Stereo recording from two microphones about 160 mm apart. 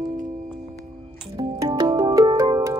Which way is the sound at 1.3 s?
25° right (ahead or behind).